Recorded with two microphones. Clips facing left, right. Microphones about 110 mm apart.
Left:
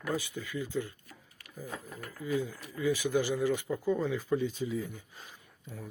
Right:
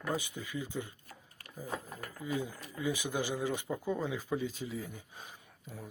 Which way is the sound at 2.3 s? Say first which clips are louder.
Left 4 dB; 20° right (ahead or behind).